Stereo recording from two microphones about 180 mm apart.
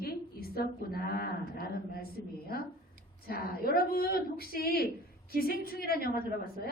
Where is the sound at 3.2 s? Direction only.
55° left (ahead or behind).